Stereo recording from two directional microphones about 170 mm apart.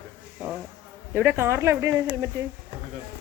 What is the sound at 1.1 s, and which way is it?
A woman's voice, 15° right (ahead or behind).